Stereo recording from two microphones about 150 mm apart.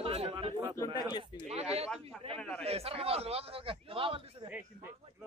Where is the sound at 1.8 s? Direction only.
Centre (ahead or behind).